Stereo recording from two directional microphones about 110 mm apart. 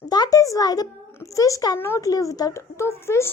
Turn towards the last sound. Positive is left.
turn(degrees=25)  # may be behind; listen again after turning